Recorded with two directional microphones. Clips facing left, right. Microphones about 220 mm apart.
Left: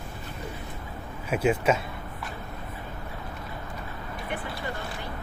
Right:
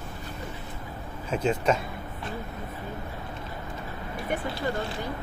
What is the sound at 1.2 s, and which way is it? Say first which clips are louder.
Speech: left 1 dB; 10° left (ahead or behind).